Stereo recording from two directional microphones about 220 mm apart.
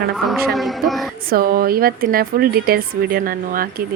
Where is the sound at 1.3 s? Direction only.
40° right (ahead or behind).